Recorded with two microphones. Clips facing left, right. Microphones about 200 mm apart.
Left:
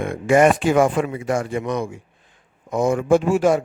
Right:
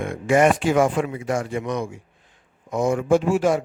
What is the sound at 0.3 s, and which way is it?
Speech, 55° left (ahead or behind).